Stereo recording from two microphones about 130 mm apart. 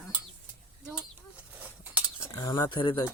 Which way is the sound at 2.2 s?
25° left (ahead or behind).